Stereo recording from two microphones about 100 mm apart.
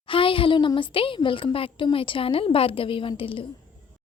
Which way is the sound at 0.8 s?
60° left (ahead or behind).